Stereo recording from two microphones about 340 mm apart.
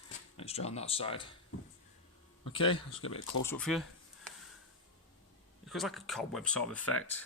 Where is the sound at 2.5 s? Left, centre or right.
Centre.